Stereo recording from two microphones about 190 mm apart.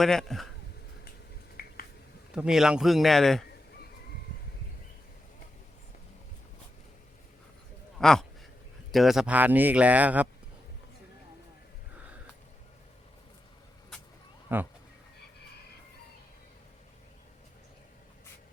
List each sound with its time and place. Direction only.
0.0 s a man's voice: centre (ahead or behind)
1.5 s finger snapping: 50° left (ahead or behind)
2.3 s a man's voice: 5° right (ahead or behind)
7.9 s speech: 5° left (ahead or behind)
14.5 s speech: 10° right (ahead or behind)